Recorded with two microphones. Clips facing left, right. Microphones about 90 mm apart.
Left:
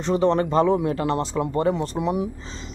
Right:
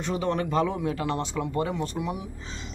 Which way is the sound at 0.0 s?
35° left (ahead or behind).